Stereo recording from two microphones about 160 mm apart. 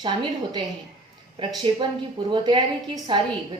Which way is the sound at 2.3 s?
30° right (ahead or behind).